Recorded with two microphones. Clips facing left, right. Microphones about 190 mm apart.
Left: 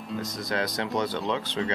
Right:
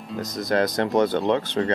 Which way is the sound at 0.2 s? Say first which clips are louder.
Right 9 dB; 45° right (ahead or behind).